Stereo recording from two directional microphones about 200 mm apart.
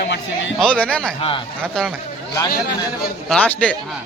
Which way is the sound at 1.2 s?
25° left (ahead or behind).